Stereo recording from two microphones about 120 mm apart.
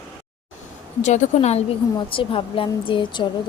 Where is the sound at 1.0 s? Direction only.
80° left.